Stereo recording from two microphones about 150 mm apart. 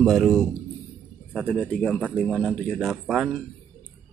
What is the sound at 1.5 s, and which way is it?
Speech, 10° left (ahead or behind).